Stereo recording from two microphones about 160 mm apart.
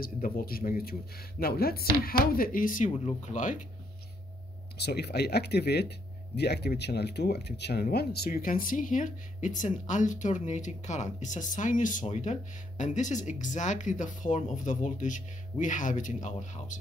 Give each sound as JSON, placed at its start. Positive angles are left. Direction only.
{"t": 0.0, "sound": "speech", "side_deg": 65}
{"t": 4.7, "sound": "speech", "side_deg": 90}